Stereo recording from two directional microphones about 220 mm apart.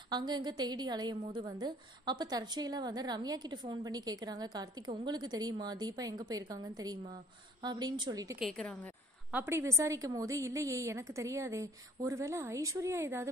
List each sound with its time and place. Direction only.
0.1 s a woman's voice: 20° right (ahead or behind)
8.4 s a woman's voice: centre (ahead or behind)
9.3 s a woman's voice: 10° right (ahead or behind)